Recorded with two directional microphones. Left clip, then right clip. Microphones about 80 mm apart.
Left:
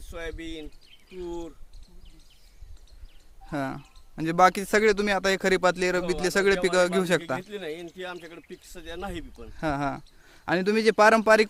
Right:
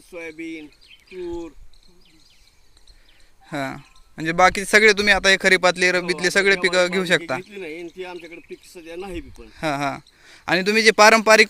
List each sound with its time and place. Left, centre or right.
0.1 s speech: left
1.2 s speech: left
3.4 s speech: centre
4.7 s speech: centre; by 6.6 s left
6.6 s a man's voice: left
9.5 s speech: centre
11.2 s speech: centre